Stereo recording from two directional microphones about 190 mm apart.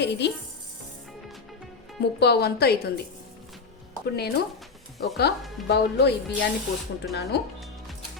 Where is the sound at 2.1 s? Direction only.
60° left (ahead or behind).